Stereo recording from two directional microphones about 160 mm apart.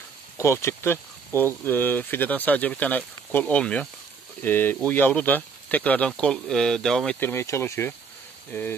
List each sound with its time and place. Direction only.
0.4 s speech: 15° left (ahead or behind)
7.2 s speech: 15° left (ahead or behind)